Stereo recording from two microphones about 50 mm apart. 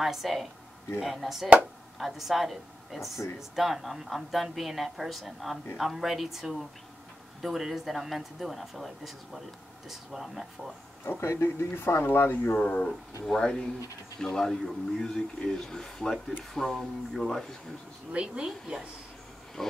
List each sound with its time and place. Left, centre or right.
0.0 s a woman's voice: centre
11.1 s speech: left
12.5 s speech: left
13.2 s speech: centre
18.1 s speech: centre
19.6 s speech: centre